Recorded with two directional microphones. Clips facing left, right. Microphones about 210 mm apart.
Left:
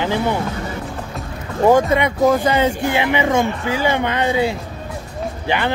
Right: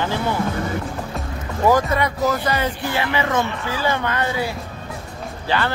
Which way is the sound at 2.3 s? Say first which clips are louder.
Left 6 dB; 15° left (ahead or behind).